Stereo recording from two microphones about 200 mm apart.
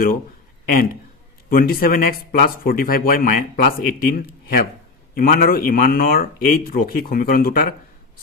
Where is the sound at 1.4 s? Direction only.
45° left (ahead or behind).